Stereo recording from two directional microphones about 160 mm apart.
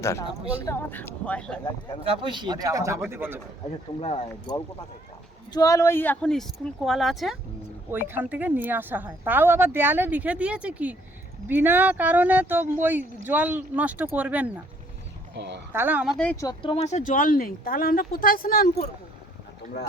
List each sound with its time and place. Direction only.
0.0 s speech: 20° left (ahead or behind)
2.0 s speech: 30° right (ahead or behind); by 3.4 s 15° right (ahead or behind)
4.0 s speech: 35° left (ahead or behind)
5.5 s speech: 20° left (ahead or behind); by 7.3 s centre (ahead or behind)
7.9 s speech: 15° right (ahead or behind)
15.4 s speech: 90° right
15.7 s speech: 10° right (ahead or behind)
16.1 s speech: 10° left (ahead or behind)
16.4 s speech: 25° left (ahead or behind)
16.7 s speech: 40° left (ahead or behind)
17.0 s speech: 55° left (ahead or behind)